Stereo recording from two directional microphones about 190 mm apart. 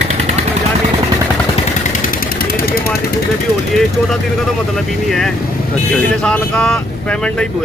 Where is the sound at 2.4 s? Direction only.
50° left (ahead or behind).